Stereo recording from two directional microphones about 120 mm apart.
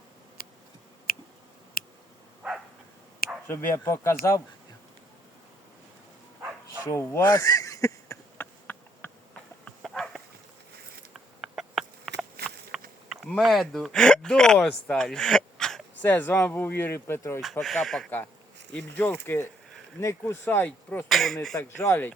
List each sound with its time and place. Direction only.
2.4 s dog: 5° right (ahead or behind)
3.4 s speech: 20° left (ahead or behind)
6.9 s speech: 20° left (ahead or behind)
7.3 s a sound: 30° left (ahead or behind)
8.6 s insect: 10° left (ahead or behind)
11.3 s a sound: centre (ahead or behind)
13.2 s speech: centre (ahead or behind)
16.0 s speech: 15° left (ahead or behind)
17.4 s speech: centre (ahead or behind)
18.7 s speech: 10° left (ahead or behind)
21.1 s speech: centre (ahead or behind)
21.6 s speech: 20° left (ahead or behind)